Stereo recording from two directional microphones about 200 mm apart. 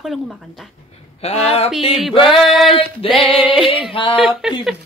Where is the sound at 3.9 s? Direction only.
25° left (ahead or behind).